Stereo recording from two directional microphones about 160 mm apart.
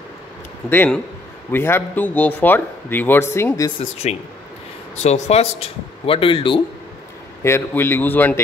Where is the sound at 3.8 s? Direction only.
40° left (ahead or behind).